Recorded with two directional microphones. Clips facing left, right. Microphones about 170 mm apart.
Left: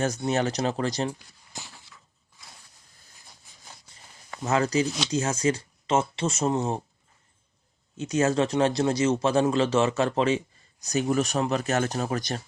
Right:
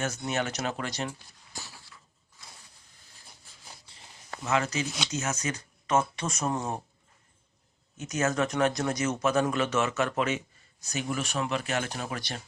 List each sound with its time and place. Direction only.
0.0 s speech: 35° left (ahead or behind)
1.5 s a sound: 20° left (ahead or behind)
4.4 s speech: 35° left (ahead or behind)
7.9 s speech: 30° left (ahead or behind)